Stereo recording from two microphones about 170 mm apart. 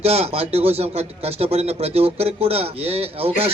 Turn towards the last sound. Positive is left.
turn(degrees=-35)  # may be behind; listen again after turning